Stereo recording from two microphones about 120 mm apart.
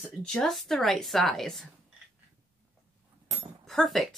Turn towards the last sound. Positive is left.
turn(degrees=0)  # may be behind; listen again after turning